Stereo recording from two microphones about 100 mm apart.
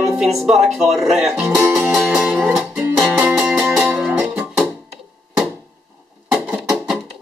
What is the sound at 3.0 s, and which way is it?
Music, 5° right (ahead or behind).